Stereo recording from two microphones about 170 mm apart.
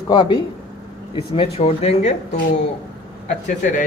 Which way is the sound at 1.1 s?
35° left (ahead or behind).